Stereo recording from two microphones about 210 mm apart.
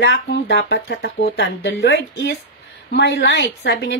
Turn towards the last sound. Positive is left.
turn(degrees=55)  # may be behind; listen again after turning